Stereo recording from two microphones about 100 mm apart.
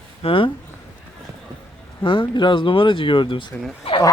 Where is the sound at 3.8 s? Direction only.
65° left (ahead or behind).